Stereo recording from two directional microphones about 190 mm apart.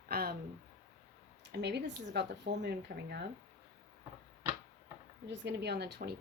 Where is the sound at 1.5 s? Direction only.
60° right (ahead or behind).